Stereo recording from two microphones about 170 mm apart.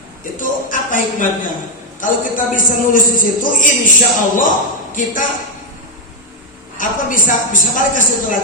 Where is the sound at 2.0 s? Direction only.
50° left (ahead or behind).